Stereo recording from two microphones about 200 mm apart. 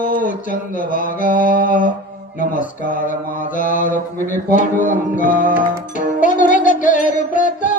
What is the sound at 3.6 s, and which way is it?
Mantra, 40° left (ahead or behind).